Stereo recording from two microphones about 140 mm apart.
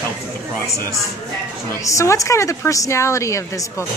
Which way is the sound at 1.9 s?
20° left (ahead or behind).